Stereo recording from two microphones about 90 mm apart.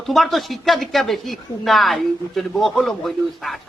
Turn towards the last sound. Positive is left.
turn(degrees=0)  # may be behind; listen again after turning